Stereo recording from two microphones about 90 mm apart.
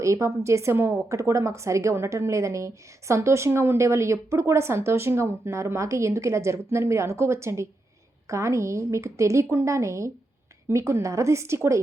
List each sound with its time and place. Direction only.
0.0 s a woman's voice: 35° right (ahead or behind)